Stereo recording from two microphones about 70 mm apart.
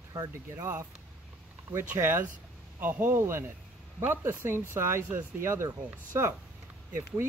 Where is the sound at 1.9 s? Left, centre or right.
Right.